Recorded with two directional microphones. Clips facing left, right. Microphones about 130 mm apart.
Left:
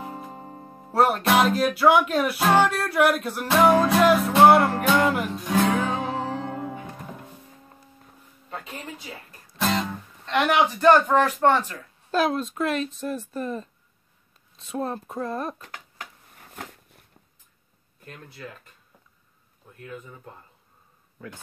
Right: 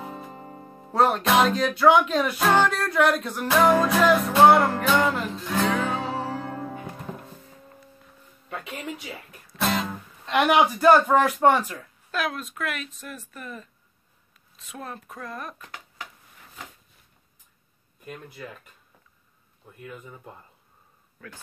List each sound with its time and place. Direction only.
0.0 s music: 20° left (ahead or behind)
0.9 s music: 5° left (ahead or behind)
9.6 s music: 5° right (ahead or behind)
11.4 s speech: 10° right (ahead or behind)
12.1 s speech: 30° left (ahead or behind)
14.7 s speech: 30° left (ahead or behind)
15.7 s a sound: 50° left (ahead or behind)
18.0 s speech: 10° right (ahead or behind)
19.8 s speech: 10° right (ahead or behind)